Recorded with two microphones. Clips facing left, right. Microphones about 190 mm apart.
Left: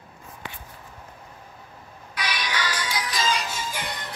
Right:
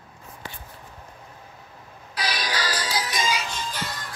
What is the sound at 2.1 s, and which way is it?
Music, 35° right (ahead or behind).